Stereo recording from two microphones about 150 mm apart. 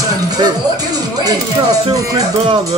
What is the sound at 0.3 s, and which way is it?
Speech, 25° right (ahead or behind).